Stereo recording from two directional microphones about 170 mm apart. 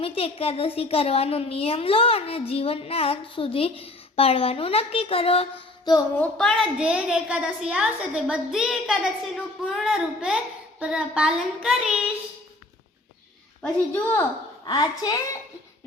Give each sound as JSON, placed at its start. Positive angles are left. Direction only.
{"t": 0.0, "sound": "a woman's voice", "side_deg": 35}
{"t": 6.1, "sound": "a child's voice", "side_deg": 5}
{"t": 13.6, "sound": "a woman's voice", "side_deg": 15}
{"t": 14.6, "sound": "a woman's voice", "side_deg": 25}